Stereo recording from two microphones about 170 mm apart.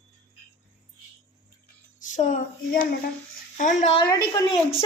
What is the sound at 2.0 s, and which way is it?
A woman's voice, 45° left (ahead or behind).